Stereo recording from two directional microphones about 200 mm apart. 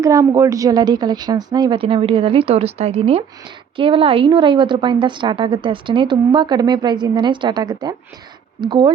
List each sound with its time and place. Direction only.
0.0 s a woman's voice: 15° right (ahead or behind)